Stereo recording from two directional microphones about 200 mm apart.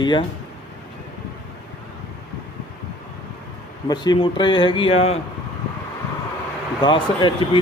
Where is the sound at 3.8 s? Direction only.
20° left (ahead or behind).